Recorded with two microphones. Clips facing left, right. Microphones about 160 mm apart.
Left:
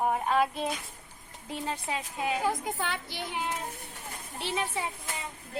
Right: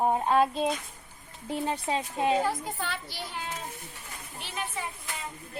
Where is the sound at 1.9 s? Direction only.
30° right (ahead or behind).